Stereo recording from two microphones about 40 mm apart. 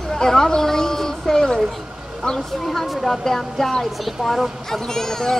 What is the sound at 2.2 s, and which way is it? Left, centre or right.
Speech, left.